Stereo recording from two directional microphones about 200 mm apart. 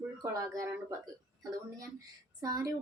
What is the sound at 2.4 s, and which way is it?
Speech, 20° right (ahead or behind).